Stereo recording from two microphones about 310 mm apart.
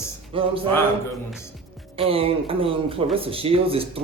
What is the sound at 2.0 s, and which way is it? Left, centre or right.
A man's voice, centre.